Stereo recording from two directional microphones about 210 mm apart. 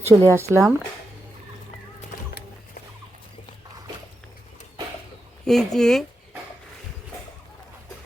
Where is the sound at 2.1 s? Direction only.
45° left (ahead or behind).